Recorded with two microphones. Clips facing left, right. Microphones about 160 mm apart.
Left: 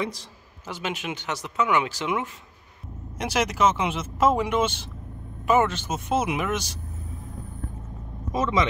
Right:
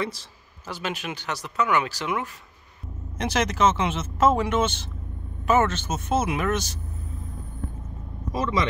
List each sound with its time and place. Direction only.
0.0 s a man's voice: 20° left (ahead or behind)
3.2 s speech: 10° left (ahead or behind)
8.3 s speech: 20° left (ahead or behind)